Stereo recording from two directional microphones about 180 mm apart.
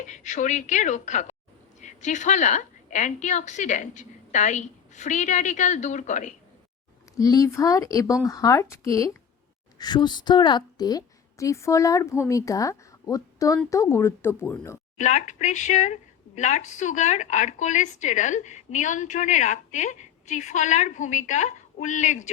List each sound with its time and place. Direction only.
0.1 s a woman's voice: 45° left (ahead or behind)
7.2 s a woman's voice: 20° left (ahead or behind)
14.9 s a woman's voice: 40° left (ahead or behind)